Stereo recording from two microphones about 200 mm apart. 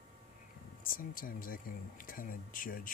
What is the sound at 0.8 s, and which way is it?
Speech, 45° left (ahead or behind).